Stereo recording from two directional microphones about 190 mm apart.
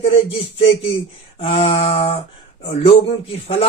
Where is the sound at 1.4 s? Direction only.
30° left (ahead or behind).